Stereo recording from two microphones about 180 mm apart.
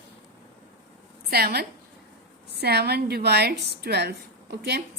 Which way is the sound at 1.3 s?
60° right (ahead or behind).